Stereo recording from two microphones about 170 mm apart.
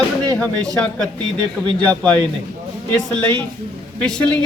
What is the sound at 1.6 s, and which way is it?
Speech, 25° right (ahead or behind).